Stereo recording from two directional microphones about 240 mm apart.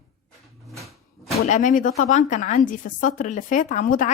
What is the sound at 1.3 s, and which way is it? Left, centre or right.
A woman's voice, left.